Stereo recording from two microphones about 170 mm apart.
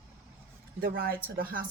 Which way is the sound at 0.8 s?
60° right (ahead or behind).